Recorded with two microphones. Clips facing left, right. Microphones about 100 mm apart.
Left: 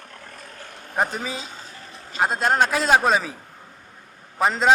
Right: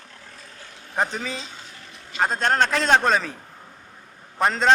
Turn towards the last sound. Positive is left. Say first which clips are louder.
# even
turn(degrees=5)  # may be behind; listen again after turning